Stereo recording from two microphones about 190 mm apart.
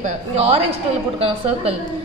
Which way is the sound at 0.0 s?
30° right (ahead or behind).